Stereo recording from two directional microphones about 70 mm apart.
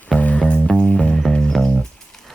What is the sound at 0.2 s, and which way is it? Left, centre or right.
Music, centre.